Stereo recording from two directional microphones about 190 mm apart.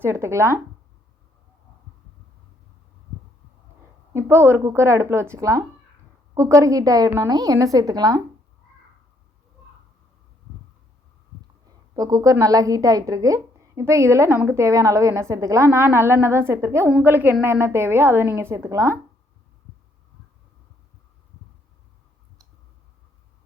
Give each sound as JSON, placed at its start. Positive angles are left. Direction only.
{"t": 0.0, "sound": "a woman's voice", "side_deg": -15}
{"t": 4.1, "sound": "a woman's voice", "side_deg": -10}
{"t": 11.7, "sound": "a woman's voice", "side_deg": -20}